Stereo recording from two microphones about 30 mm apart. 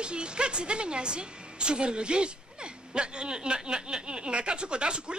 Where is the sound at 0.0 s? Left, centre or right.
Right.